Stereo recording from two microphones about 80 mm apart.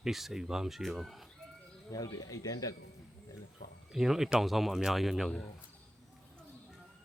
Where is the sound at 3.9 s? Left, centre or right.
Centre.